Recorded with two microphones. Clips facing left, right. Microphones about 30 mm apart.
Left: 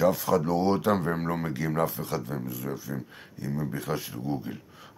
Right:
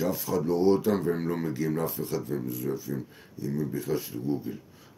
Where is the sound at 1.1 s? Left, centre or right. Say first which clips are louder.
Right 1 dB; left.